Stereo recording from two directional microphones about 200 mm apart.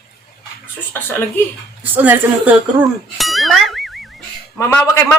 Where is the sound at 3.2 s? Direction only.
Centre (ahead or behind).